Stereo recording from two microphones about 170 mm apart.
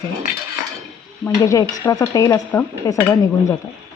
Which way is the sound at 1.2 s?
20° left (ahead or behind).